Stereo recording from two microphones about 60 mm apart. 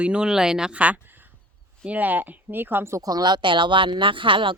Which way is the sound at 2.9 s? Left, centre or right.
Right.